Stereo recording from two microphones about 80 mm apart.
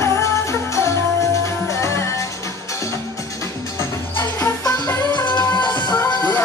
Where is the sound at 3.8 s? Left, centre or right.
Left.